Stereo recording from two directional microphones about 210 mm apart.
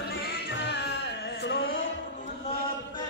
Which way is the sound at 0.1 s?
55° left (ahead or behind).